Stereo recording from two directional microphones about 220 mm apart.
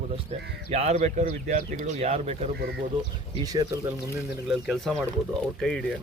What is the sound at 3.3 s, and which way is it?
Speech, 20° right (ahead or behind).